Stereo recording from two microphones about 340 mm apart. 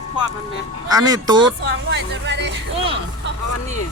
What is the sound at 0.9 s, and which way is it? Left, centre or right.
Speech, centre.